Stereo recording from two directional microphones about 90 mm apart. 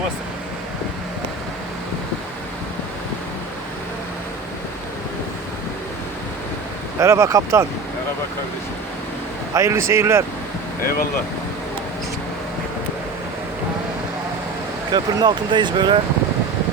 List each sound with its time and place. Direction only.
7.0 s speech: 35° right (ahead or behind)
9.6 s speech: 30° right (ahead or behind)
14.9 s speech: 55° right (ahead or behind)